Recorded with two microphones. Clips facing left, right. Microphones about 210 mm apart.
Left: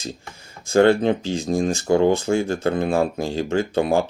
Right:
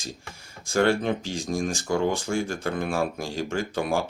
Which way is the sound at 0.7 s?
25° left (ahead or behind).